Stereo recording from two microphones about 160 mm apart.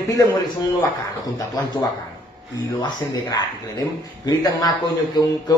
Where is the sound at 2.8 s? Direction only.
25° left (ahead or behind).